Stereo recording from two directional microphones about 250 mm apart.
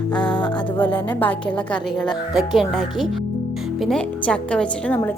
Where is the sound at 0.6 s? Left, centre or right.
Centre.